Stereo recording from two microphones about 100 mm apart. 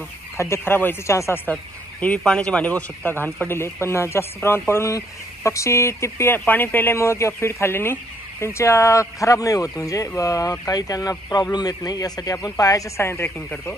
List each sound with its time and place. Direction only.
0.4 s speech: 25° left (ahead or behind)
1.5 s speech: 15° left (ahead or behind)